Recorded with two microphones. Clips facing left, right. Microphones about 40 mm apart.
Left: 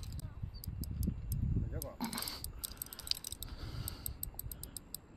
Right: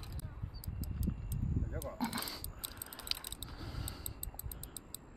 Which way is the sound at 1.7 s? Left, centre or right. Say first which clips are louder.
Right 3 dB; right.